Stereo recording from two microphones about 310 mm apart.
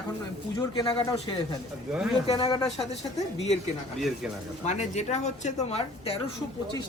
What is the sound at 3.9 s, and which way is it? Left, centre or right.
Speech, centre.